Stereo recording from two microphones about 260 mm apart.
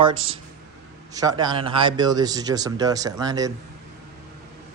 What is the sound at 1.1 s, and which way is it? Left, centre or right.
Speech, centre.